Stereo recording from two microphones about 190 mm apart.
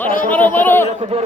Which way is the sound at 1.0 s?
35° right (ahead or behind).